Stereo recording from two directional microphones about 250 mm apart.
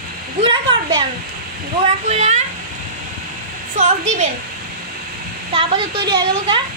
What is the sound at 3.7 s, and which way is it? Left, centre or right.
Speech, right.